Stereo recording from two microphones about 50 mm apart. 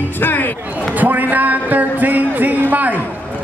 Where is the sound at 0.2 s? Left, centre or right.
Left.